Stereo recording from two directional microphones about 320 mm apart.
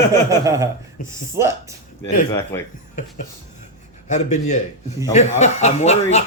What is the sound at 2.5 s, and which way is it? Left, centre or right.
Speech, centre.